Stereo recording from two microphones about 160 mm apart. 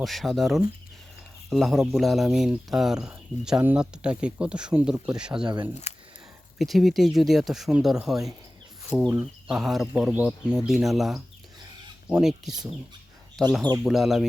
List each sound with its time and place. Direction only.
0.0 s speech: centre (ahead or behind)
5.9 s a sound: 40° left (ahead or behind)
6.6 s speech: centre (ahead or behind)